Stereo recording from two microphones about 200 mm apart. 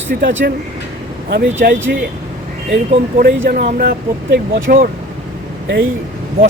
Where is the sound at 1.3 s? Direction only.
60° right (ahead or behind).